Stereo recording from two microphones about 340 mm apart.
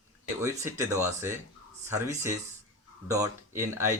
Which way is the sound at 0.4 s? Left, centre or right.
Centre.